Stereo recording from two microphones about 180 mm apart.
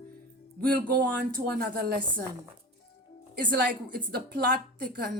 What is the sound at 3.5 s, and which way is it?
A woman's voice, 55° right (ahead or behind).